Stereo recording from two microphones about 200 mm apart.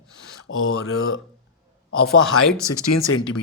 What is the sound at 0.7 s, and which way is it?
Speech, 90° left.